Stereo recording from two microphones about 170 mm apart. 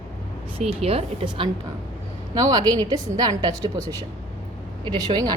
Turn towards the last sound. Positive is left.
turn(degrees=-25)  # may be behind; listen again after turning